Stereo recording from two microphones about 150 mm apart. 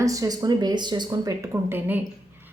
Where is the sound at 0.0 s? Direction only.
20° right (ahead or behind).